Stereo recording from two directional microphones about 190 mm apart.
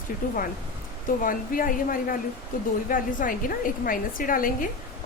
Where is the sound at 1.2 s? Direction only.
45° left (ahead or behind).